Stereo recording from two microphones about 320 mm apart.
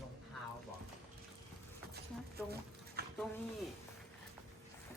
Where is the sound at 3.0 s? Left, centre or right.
Right.